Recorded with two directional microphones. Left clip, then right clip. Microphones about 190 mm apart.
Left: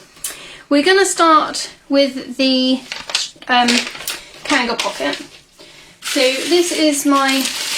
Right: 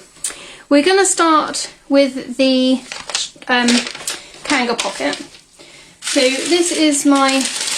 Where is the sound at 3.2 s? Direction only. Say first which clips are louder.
Left 2 dB; 35° right (ahead or behind).